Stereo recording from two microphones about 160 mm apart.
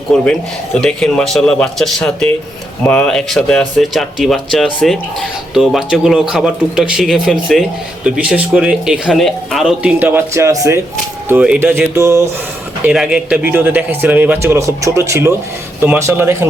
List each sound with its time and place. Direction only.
0.1 s speech: 5° left (ahead or behind); by 10.8 s 20° right (ahead or behind)
11.3 s speech: 5° right (ahead or behind)
12.8 s speech: 5° right (ahead or behind)